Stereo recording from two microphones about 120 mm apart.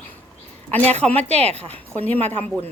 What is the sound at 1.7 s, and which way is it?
Speech, 15° left (ahead or behind).